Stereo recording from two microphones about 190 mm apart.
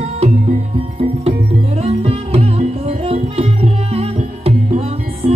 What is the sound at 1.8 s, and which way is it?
Music, 30° right (ahead or behind).